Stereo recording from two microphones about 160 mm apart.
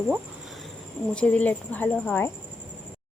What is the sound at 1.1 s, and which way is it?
A woman's voice, 10° left (ahead or behind).